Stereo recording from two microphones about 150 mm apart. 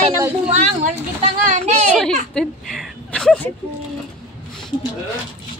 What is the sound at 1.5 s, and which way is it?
Speech, 50° right (ahead or behind).